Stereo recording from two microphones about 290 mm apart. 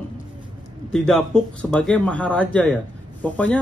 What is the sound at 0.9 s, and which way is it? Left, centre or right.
A man's voice, centre.